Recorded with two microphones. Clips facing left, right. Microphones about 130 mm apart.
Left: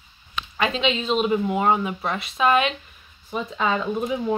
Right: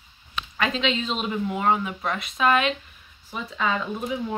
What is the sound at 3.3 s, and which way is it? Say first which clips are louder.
Speech: left 3 dB; 25° left (ahead or behind).